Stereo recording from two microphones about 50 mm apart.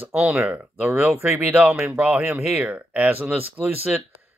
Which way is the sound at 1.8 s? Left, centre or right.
Right.